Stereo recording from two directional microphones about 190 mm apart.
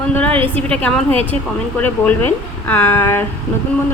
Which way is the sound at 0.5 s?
5° left (ahead or behind).